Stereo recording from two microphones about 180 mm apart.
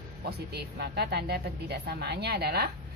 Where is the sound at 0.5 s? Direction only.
60° right (ahead or behind).